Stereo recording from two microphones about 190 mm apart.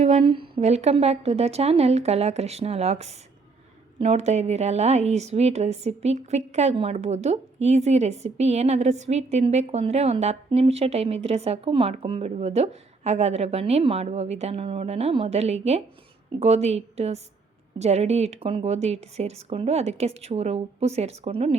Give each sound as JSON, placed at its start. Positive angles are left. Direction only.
{"t": 0.0, "sound": "a woman's voice", "side_deg": -35}